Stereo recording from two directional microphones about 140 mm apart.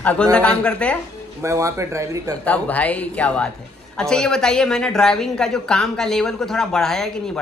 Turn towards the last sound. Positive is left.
turn(degrees=5)  # may be behind; listen again after turning